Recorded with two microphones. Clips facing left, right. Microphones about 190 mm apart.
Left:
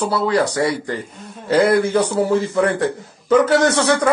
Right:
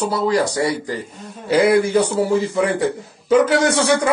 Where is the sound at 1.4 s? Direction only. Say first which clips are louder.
Even; 10° right (ahead or behind).